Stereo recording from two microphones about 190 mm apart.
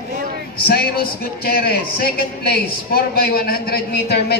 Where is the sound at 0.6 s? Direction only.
55° left (ahead or behind).